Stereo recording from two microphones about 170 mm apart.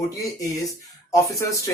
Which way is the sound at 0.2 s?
20° left (ahead or behind).